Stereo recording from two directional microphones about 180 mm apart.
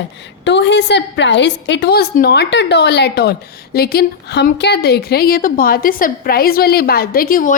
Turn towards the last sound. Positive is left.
turn(degrees=50)  # may be behind; listen again after turning